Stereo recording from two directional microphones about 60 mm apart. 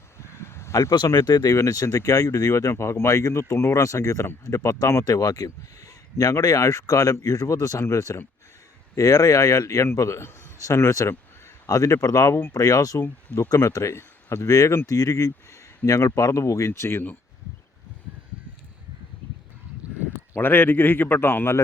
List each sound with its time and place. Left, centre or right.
0.2 s a sound: left
0.8 s speech: left
5.0 s a man's voice: left
13.5 s speech: left
14.4 s a man's voice: left
15.9 s a man's voice: left
20.3 s a man's voice: left